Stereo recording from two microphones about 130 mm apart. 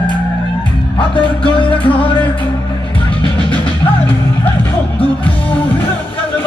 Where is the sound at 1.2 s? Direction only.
40° left (ahead or behind).